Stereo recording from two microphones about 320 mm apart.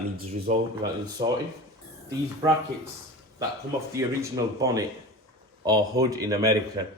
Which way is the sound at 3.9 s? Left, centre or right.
Centre.